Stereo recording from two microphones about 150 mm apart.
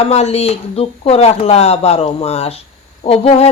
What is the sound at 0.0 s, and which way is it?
Speech, 45° left (ahead or behind).